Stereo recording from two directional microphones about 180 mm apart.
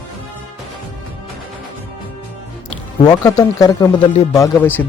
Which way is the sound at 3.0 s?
20° left (ahead or behind).